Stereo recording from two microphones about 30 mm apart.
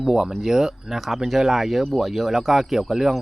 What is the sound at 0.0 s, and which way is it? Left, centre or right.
Speech, centre.